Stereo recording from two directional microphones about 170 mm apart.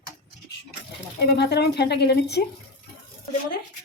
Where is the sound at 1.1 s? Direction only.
80° left.